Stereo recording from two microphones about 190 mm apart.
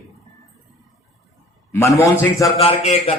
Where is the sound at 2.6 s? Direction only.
35° left (ahead or behind).